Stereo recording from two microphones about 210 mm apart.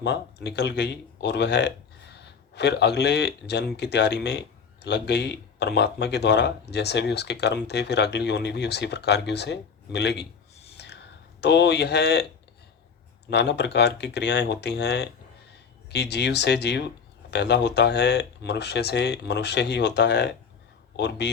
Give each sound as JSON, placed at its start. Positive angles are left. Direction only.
{"t": 0.0, "sound": "speech", "side_deg": 55}
{"t": 10.8, "sound": "a sound", "side_deg": 55}
{"t": 11.3, "sound": "speech", "side_deg": 55}
{"t": 13.3, "sound": "speech", "side_deg": 55}